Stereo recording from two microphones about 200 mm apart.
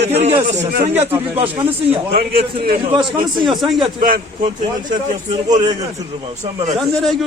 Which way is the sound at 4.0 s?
45° right (ahead or behind).